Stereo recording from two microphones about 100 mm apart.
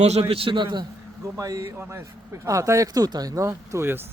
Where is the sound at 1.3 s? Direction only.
35° right (ahead or behind).